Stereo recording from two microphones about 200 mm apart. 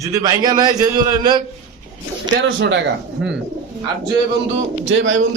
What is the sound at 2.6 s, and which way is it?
Speech, 65° right (ahead or behind).